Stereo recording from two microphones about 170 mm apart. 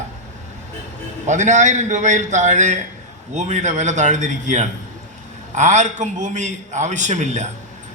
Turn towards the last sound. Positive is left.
turn(degrees=-45)  # may be behind; listen again after turning